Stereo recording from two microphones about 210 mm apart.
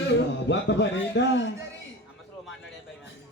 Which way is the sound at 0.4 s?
60° left (ahead or behind).